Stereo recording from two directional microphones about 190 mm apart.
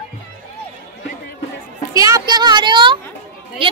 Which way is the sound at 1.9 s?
15° right (ahead or behind).